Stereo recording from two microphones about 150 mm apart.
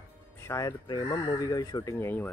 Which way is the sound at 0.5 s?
25° left (ahead or behind).